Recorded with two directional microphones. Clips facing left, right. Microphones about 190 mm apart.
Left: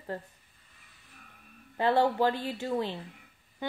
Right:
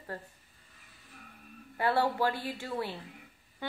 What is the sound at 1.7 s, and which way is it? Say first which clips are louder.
Speech: left 3 dB; 20° left (ahead or behind).